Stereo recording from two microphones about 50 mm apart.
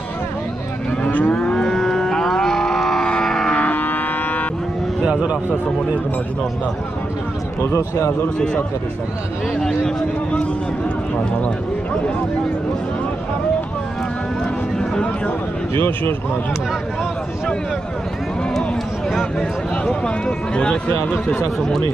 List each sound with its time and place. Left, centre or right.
1.0 s moo: left
1.3 s livestock: centre
3.5 s a sound: left
7.6 s speech: left
9.6 s speech: centre
19.8 s speech: left